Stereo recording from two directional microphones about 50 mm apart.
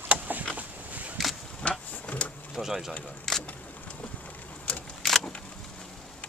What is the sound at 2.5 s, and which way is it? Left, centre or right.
Speech, centre.